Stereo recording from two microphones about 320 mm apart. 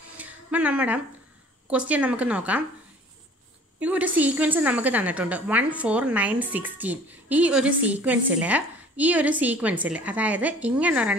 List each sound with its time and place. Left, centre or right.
0.2 s a sound: centre
1.7 s a woman's voice: centre
3.8 s a woman's voice: centre